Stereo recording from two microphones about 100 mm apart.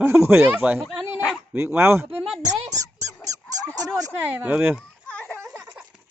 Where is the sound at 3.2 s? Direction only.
35° right (ahead or behind).